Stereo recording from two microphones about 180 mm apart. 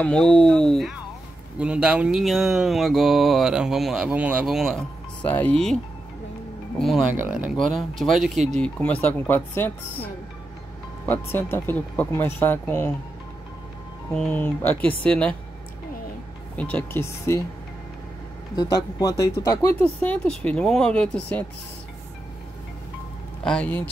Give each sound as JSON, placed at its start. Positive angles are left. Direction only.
{"t": 0.0, "sound": "speech", "side_deg": 5}
{"t": 6.8, "sound": "speech", "side_deg": 0}
{"t": 11.1, "sound": "speech", "side_deg": 10}
{"t": 14.1, "sound": "speech", "side_deg": 5}
{"t": 16.5, "sound": "speech", "side_deg": 5}
{"t": 18.6, "sound": "speech", "side_deg": 20}
{"t": 19.8, "sound": "speech", "side_deg": 5}
{"t": 23.4, "sound": "speech", "side_deg": 5}